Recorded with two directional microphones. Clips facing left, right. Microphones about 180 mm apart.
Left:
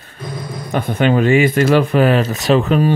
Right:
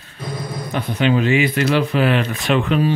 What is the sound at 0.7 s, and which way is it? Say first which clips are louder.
Speech: left 3 dB; 50° left (ahead or behind).